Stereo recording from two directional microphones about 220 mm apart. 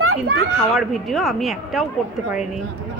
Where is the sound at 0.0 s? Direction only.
80° right.